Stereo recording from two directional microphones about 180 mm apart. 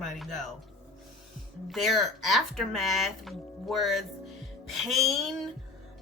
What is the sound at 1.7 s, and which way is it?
A woman's voice, centre (ahead or behind).